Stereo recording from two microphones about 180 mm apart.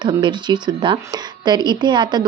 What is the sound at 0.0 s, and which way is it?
A woman's voice, 25° right (ahead or behind).